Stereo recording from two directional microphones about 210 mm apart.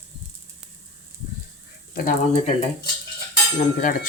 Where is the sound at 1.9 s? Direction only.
45° left (ahead or behind).